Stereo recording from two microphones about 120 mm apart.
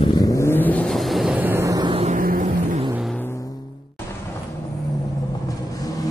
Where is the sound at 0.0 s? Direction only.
35° left (ahead or behind); by 0.9 s 10° left (ahead or behind).